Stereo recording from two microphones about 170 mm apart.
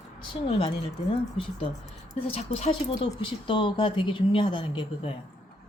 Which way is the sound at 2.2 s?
35° left (ahead or behind).